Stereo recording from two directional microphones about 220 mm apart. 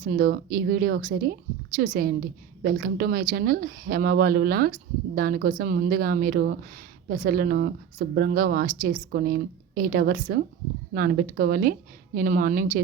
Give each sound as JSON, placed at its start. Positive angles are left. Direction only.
{"t": 0.0, "sound": "a woman's voice", "side_deg": -40}